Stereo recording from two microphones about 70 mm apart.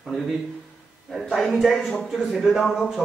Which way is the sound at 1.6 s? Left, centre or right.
Centre.